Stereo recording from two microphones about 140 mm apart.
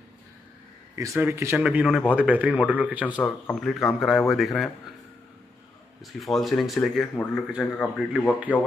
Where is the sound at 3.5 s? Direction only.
Centre (ahead or behind).